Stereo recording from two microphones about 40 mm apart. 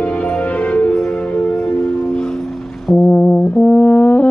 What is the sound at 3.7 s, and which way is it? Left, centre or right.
Brass instrument, left.